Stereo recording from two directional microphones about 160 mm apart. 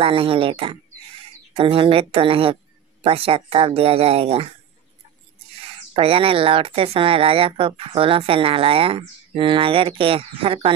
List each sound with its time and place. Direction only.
0.0 s speech: 35° right (ahead or behind)
5.9 s speech: 35° right (ahead or behind)